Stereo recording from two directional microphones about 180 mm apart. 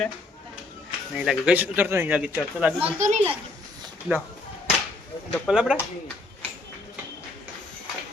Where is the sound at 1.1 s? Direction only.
5° right (ahead or behind).